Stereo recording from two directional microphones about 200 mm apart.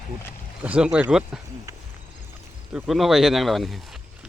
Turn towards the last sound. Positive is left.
turn(degrees=0)  # may be behind; listen again after turning